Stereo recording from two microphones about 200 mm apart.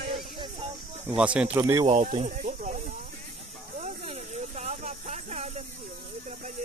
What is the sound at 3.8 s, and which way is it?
Snake, 35° right (ahead or behind).